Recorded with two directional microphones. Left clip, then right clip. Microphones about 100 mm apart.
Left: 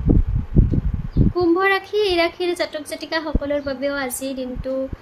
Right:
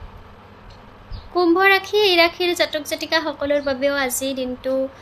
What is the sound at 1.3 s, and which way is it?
A woman's voice, 25° left (ahead or behind).